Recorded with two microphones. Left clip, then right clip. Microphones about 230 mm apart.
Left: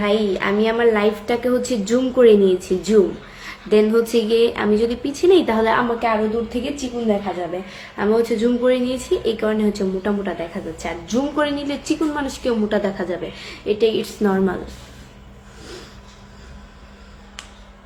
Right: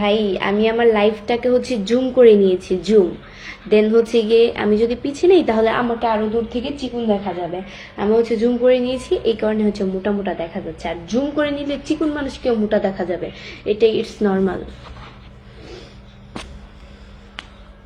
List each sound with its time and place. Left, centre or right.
0.0 s a woman's voice: centre